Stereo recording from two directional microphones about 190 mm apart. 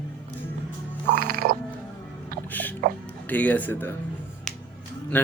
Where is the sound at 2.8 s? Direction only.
50° right (ahead or behind).